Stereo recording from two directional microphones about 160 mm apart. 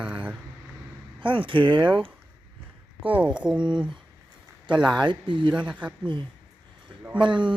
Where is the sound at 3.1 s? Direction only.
5° right (ahead or behind).